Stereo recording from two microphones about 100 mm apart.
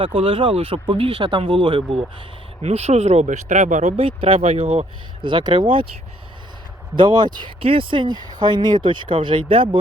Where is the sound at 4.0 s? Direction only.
70° right (ahead or behind).